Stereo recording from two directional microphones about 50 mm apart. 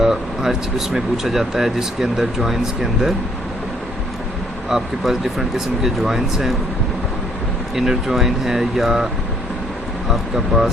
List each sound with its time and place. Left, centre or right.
0.0 s speech: centre
4.7 s speech: centre
7.8 s speech: centre
10.1 s speech: centre